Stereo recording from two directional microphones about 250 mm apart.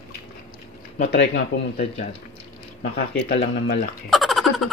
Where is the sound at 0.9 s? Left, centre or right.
Left.